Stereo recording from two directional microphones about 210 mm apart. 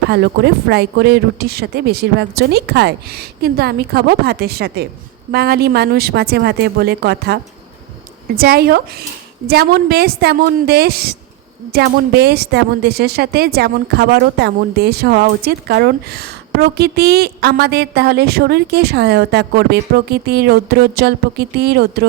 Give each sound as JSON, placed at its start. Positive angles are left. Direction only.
{"t": 0.1, "sound": "a woman's voice", "side_deg": -50}
{"t": 8.4, "sound": "a woman's voice", "side_deg": -45}